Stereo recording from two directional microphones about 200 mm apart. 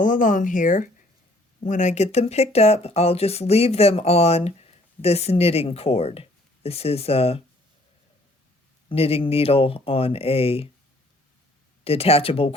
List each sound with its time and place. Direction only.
0.0 s speech: 40° left (ahead or behind)
8.9 s speech: 30° left (ahead or behind)
11.9 s speech: 30° left (ahead or behind)